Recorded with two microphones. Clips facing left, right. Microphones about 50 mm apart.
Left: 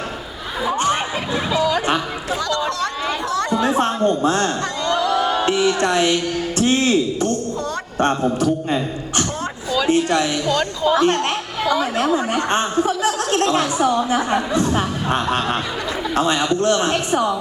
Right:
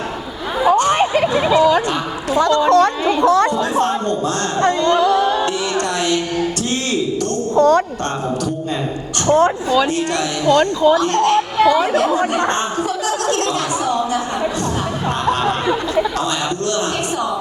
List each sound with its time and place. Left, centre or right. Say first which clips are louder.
0.9 s music: right 8 dB; right
1.5 s a sound: right 5 dB; right
2.4 s chatter: right 11 dB; right
3.6 s a sound: even; left
4.6 s music: right 6 dB; right
5.5 s a man's voice: left 2 dB; left
8.0 s a man's voice: left 3 dB; left
9.2 s speech: right 12 dB; right
9.9 s a man's voice: left 2 dB; left
12.0 s speech: right 3 dB; right
12.5 s a man's voice: left 1 dB; left
14.7 s a man's voice: even; left